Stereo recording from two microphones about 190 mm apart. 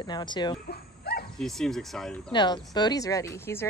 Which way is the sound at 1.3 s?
Centre (ahead or behind).